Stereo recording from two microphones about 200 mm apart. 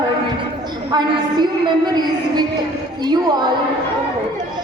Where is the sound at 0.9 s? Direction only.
20° right (ahead or behind).